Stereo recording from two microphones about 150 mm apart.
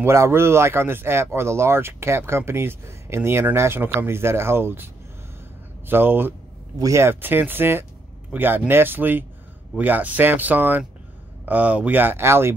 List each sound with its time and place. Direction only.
0.0 s speech: 20° right (ahead or behind)
5.9 s speech: 15° right (ahead or behind)